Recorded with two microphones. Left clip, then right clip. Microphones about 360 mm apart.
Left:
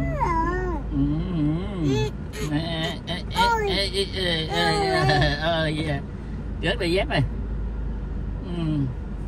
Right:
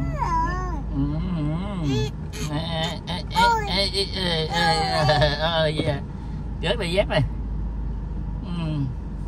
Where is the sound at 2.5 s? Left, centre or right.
Centre.